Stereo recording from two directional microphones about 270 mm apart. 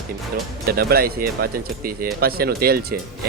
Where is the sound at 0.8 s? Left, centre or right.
Right.